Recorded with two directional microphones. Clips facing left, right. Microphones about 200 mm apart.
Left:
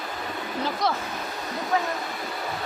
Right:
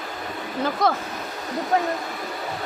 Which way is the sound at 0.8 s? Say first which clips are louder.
Right 5 dB; 50° right (ahead or behind).